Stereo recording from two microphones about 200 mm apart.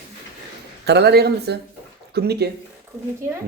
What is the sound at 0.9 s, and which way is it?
Speech, 55° right (ahead or behind).